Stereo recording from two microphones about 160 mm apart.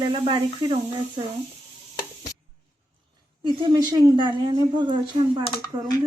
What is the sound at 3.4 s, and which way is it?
A woman's voice, 25° right (ahead or behind).